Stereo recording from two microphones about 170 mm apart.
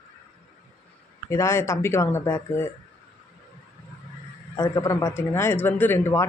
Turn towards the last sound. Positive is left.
turn(degrees=15)  # may be behind; listen again after turning